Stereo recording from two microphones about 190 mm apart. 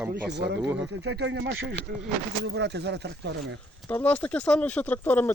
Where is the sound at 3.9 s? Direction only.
10° left (ahead or behind).